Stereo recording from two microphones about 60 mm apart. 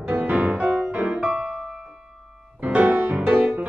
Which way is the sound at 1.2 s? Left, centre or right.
Centre.